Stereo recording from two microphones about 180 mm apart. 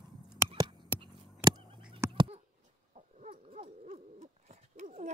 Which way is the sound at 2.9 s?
40° right (ahead or behind).